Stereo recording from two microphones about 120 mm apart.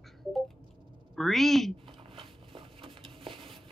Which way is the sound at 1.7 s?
45° right (ahead or behind).